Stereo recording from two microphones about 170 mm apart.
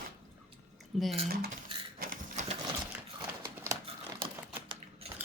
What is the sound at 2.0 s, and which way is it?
Sewing machine, 55° right (ahead or behind).